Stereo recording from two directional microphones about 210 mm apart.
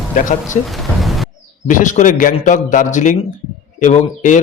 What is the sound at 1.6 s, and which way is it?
A man's voice, 35° left (ahead or behind).